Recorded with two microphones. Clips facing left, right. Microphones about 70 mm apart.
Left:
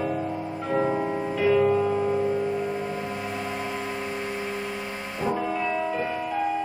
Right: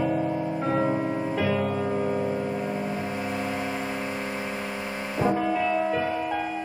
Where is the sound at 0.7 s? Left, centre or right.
Centre.